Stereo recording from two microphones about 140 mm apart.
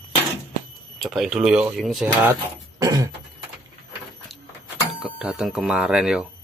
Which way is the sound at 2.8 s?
25° right (ahead or behind).